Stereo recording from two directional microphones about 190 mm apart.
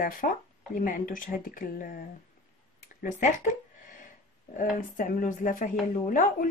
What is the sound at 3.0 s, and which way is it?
Speech, 40° left (ahead or behind).